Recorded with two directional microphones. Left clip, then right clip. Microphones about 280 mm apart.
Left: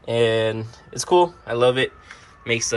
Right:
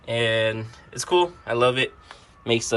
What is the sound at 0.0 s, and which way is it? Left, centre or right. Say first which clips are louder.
Speech: left 3 dB; centre.